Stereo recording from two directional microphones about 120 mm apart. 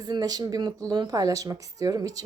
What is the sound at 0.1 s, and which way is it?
A woman's voice, 35° right (ahead or behind).